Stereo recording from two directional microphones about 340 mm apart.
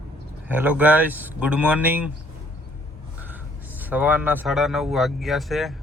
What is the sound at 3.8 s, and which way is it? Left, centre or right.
Speech, centre.